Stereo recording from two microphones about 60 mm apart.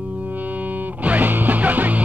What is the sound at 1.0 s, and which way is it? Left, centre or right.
Music, right.